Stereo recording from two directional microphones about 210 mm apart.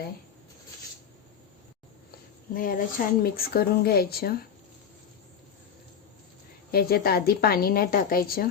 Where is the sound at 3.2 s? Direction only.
45° left (ahead or behind).